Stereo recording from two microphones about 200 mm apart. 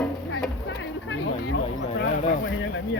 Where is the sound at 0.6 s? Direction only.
65° left (ahead or behind).